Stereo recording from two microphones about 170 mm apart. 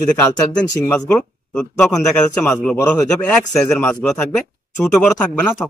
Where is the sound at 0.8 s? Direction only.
10° left (ahead or behind).